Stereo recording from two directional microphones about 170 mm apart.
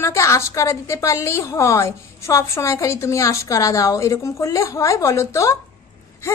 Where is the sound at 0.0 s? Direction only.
15° left (ahead or behind).